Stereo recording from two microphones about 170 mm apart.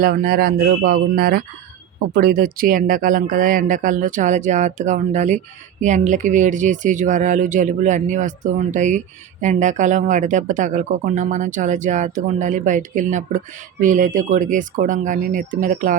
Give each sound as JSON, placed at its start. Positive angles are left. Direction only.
{"t": 0.0, "sound": "speech", "side_deg": -60}